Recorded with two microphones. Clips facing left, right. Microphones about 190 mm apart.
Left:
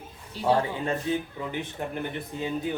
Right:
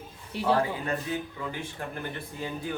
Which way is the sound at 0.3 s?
60° right (ahead or behind).